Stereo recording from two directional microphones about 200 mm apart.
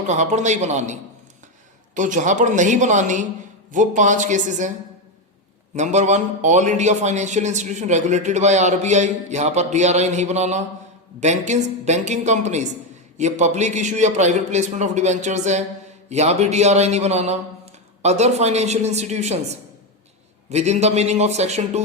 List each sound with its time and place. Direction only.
0.1 s a man's voice: 35° right (ahead or behind)
2.0 s a man's voice: 40° right (ahead or behind)
5.7 s a man's voice: 35° right (ahead or behind)
20.5 s a man's voice: 35° right (ahead or behind)